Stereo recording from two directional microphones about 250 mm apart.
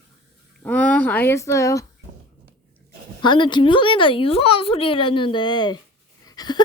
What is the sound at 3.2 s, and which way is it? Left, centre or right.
A woman's voice, centre.